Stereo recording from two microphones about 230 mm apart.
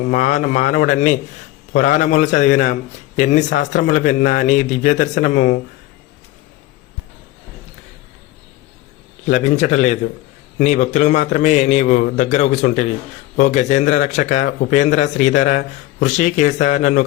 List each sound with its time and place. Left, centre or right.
0.0 s a man's voice: left
9.2 s a man's voice: left